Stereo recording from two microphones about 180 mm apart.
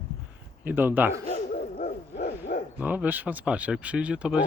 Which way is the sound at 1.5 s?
55° left (ahead or behind).